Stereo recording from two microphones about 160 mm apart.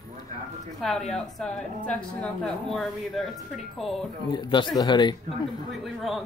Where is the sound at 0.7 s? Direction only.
Centre (ahead or behind).